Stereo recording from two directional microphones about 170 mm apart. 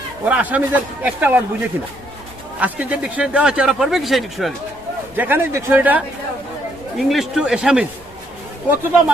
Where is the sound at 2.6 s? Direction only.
10° right (ahead or behind).